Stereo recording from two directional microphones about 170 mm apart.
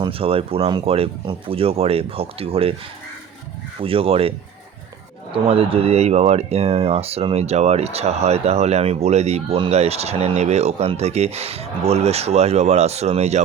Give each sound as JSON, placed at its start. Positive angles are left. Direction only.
{"t": 0.0, "sound": "speech", "side_deg": -35}
{"t": 3.8, "sound": "speech", "side_deg": -35}